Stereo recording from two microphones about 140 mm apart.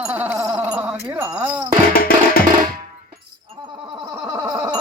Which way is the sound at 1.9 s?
90° left.